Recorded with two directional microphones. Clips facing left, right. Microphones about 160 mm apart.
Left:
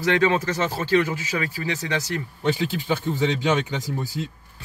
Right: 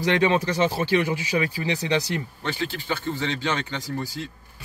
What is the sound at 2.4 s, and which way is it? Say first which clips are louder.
Speech: left 5 dB; 15° left (ahead or behind).